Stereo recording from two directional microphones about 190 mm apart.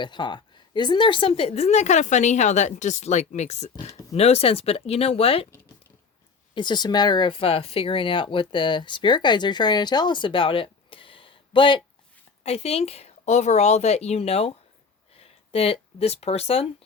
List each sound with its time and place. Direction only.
0.0 s a woman's voice: 25° left (ahead or behind)
6.5 s a woman's voice: 25° left (ahead or behind)